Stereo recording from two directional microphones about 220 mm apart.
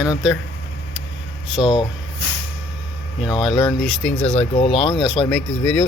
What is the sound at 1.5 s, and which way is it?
Speech, 20° left (ahead or behind).